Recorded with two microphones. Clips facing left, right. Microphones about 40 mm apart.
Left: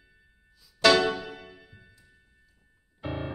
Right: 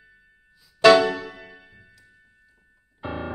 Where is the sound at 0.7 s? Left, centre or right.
Right.